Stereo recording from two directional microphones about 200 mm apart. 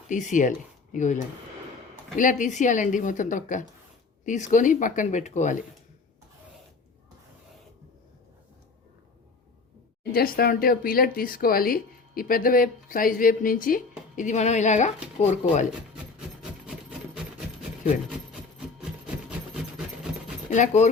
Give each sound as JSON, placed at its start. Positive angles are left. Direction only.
{"t": 0.1, "sound": "a woman's voice", "side_deg": 40}
{"t": 2.1, "sound": "a woman's voice", "side_deg": 40}
{"t": 10.0, "sound": "a woman's voice", "side_deg": 50}
{"t": 16.1, "sound": "rub", "side_deg": -5}
{"t": 20.5, "sound": "a woman's voice", "side_deg": 35}